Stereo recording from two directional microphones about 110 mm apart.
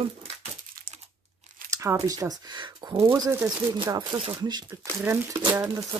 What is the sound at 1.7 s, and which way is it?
Speech, 30° right (ahead or behind).